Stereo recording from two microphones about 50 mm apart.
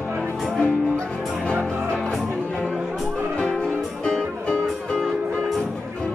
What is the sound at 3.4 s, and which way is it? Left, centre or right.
Music, left.